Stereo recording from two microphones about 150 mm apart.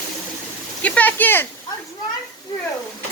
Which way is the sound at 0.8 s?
10° left (ahead or behind).